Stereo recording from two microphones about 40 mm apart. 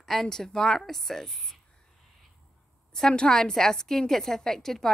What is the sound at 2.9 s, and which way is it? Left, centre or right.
A woman's voice, centre.